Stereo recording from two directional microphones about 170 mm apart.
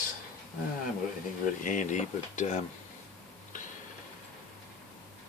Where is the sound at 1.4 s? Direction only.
50° left (ahead or behind).